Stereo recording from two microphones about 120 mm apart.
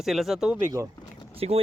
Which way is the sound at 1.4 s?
60° right (ahead or behind).